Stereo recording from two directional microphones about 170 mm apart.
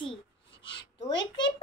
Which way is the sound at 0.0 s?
30° left (ahead or behind).